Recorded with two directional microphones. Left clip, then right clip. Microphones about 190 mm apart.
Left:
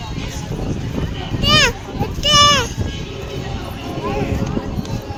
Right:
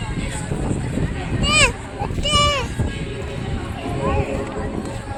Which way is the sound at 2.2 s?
50° left (ahead or behind).